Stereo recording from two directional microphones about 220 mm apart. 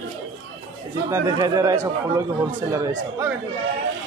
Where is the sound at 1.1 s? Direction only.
15° right (ahead or behind).